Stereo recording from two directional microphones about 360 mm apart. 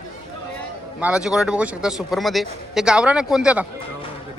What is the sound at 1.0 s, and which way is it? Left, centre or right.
Speech, centre.